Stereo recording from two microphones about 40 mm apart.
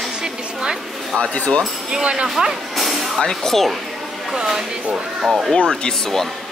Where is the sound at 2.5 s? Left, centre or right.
Centre.